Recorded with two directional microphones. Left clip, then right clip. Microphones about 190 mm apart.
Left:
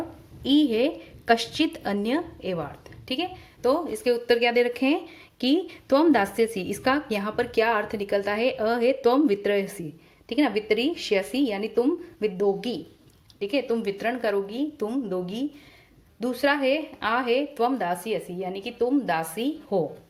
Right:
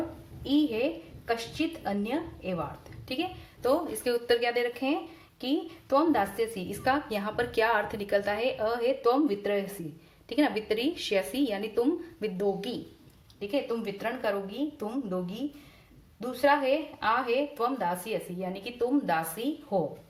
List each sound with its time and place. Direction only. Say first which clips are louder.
0.4 s a woman's voice: left 6 dB; 45° left (ahead or behind)
3.1 s a woman's voice: left 4 dB; 35° left (ahead or behind)
10.2 s speech: left 4 dB; 25° left (ahead or behind)
13.4 s a woman's voice: left 5 dB; 40° left (ahead or behind)